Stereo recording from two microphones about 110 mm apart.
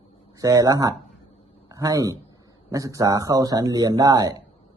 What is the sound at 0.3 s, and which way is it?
A man's voice, 30° right (ahead or behind).